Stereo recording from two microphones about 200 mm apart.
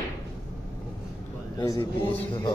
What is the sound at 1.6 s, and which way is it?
Speech, 20° left (ahead or behind).